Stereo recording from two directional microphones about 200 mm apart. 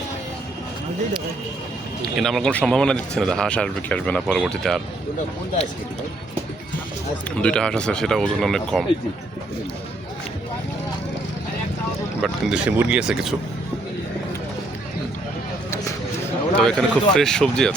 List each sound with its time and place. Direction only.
2.1 s speech: centre (ahead or behind)
7.4 s speech: 5° left (ahead or behind)
12.2 s speech: 5° right (ahead or behind)
16.2 s speech: 5° left (ahead or behind)